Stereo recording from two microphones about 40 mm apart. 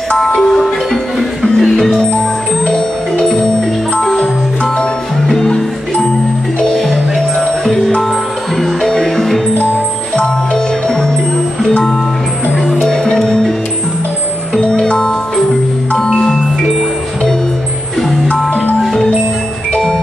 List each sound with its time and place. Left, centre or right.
0.4 s music: centre
5.4 s music: centre
6.8 s music: centre
10.1 s music: centre
14.6 s music: centre